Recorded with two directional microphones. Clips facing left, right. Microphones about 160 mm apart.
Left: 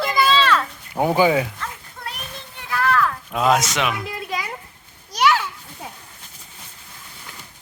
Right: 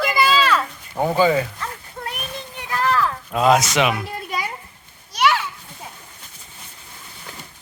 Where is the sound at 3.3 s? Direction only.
Centre (ahead or behind).